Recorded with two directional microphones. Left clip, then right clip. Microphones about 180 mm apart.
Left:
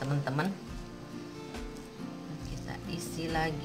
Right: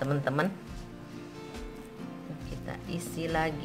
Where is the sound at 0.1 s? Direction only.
40° right (ahead or behind).